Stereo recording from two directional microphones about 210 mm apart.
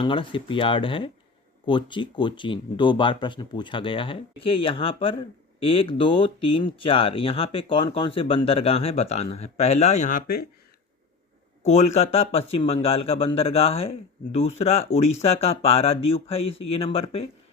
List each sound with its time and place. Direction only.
0.0 s speech: 25° left (ahead or behind); by 10.4 s 40° left (ahead or behind)
11.6 s speech: 30° left (ahead or behind)